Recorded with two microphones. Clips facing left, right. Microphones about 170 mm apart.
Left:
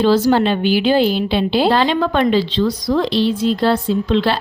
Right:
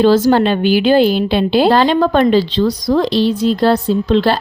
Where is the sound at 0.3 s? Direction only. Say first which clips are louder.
Right 3 dB; 50° right (ahead or behind).